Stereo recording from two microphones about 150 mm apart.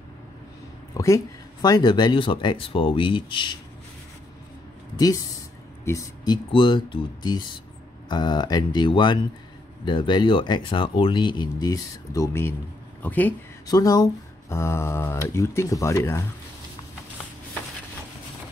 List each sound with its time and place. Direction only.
0.9 s speech: 20° left (ahead or behind)
4.9 s speech: 25° left (ahead or behind)
13.7 s speech: 25° left (ahead or behind)